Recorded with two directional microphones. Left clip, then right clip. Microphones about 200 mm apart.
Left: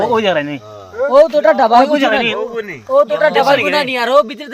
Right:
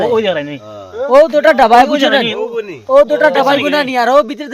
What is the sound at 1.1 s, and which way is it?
Speech, 55° right (ahead or behind).